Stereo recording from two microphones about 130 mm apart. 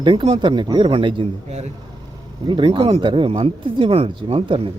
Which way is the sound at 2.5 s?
40° right (ahead or behind).